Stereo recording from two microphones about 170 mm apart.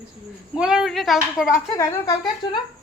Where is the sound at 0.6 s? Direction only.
5° right (ahead or behind).